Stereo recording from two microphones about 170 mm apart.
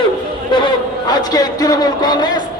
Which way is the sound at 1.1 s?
20° left (ahead or behind).